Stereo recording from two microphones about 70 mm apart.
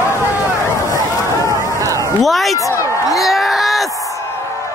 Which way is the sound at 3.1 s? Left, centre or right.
Centre.